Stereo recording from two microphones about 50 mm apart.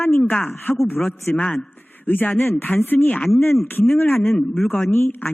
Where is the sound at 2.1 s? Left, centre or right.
Left.